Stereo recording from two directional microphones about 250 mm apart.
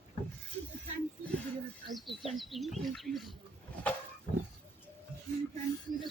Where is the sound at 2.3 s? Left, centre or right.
Centre.